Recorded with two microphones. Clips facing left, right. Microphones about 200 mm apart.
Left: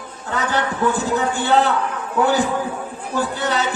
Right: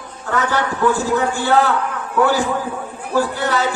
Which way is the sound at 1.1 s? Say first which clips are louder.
Right 1 dB; 20° left (ahead or behind).